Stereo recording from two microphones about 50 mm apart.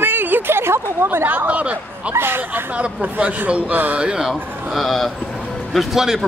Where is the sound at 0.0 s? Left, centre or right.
Right.